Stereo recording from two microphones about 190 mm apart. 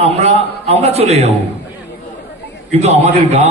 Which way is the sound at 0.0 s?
35° right (ahead or behind).